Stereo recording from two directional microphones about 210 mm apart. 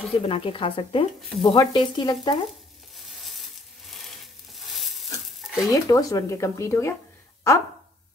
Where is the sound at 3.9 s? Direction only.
Centre (ahead or behind).